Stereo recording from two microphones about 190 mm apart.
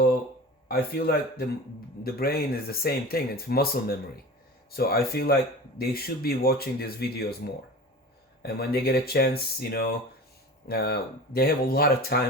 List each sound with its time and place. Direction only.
0.7 s speech: 55° left (ahead or behind)